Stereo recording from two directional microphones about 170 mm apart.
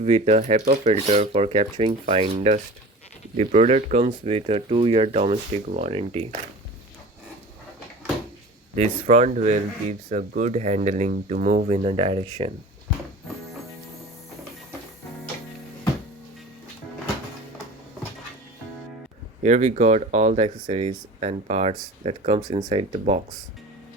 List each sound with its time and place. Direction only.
0.0 s speech: 40° right (ahead or behind)
8.7 s speech: 40° right (ahead or behind)
19.4 s speech: 45° right (ahead or behind)